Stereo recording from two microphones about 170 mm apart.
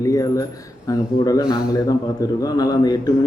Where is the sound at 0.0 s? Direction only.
20° left (ahead or behind).